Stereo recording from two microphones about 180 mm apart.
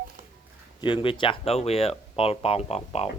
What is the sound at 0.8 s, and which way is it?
Speech, 25° left (ahead or behind).